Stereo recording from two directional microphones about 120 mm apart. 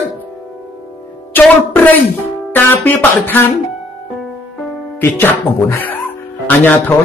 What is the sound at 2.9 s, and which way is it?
Speech, 15° left (ahead or behind).